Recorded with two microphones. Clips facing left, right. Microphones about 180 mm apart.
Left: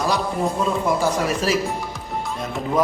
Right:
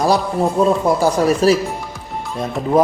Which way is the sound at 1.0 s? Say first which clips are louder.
Right 7 dB; 35° right (ahead or behind).